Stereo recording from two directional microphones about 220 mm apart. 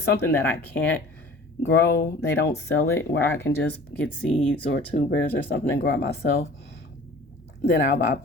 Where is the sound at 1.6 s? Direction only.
50° left (ahead or behind).